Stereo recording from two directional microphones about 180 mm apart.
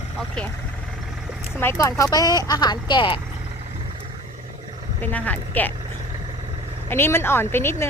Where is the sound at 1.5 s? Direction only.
15° left (ahead or behind).